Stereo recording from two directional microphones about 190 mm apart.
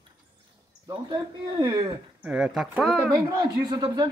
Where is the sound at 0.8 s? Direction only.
20° right (ahead or behind).